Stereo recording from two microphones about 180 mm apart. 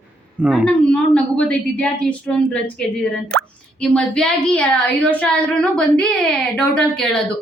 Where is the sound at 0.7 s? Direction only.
5° left (ahead or behind).